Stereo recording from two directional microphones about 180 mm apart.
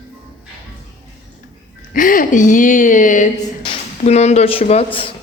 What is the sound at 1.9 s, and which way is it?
A woman's voice, 50° left (ahead or behind).